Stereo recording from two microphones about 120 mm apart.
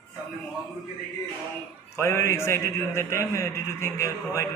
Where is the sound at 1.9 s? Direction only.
20° left (ahead or behind).